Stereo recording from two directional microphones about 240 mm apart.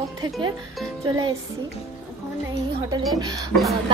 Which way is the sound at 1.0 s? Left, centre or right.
Centre.